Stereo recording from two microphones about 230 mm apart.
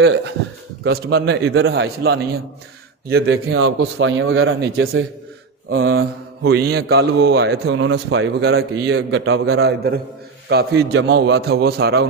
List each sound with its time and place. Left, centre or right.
0.8 s a man's voice: right
1.7 s a man's voice: right
3.5 s speech: right
6.4 s a man's voice: right
9.5 s a man's voice: right